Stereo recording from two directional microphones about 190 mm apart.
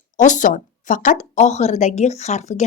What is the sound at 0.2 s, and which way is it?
Speech, 40° left (ahead or behind).